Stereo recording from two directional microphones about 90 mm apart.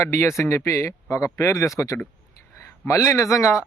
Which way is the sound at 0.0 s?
30° left (ahead or behind).